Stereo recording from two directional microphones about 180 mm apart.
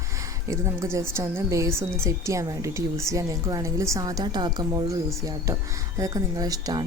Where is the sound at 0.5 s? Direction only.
15° right (ahead or behind).